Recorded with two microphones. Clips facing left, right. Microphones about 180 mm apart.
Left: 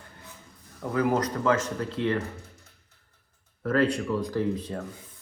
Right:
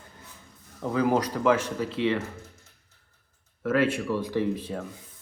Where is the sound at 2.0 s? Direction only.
85° right.